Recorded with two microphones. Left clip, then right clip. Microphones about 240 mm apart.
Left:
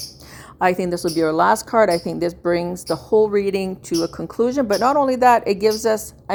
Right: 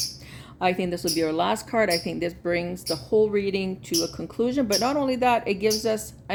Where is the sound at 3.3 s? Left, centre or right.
Left.